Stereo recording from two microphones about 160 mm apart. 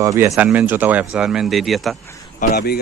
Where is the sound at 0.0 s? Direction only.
20° right (ahead or behind); by 2.0 s centre (ahead or behind).